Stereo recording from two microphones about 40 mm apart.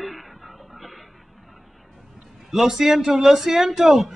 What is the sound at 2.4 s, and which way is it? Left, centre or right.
Speech, centre.